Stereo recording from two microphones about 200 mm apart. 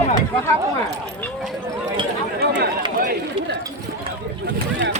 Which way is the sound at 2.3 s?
55° right (ahead or behind).